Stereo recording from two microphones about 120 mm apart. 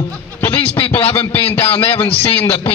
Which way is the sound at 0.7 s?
50° left (ahead or behind).